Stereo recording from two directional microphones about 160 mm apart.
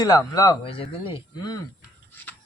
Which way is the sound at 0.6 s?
35° left (ahead or behind).